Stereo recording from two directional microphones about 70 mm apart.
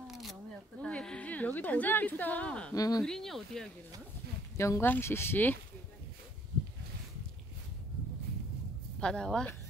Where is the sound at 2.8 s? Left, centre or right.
Left.